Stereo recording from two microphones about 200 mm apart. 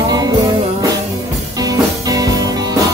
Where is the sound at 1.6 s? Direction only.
15° right (ahead or behind).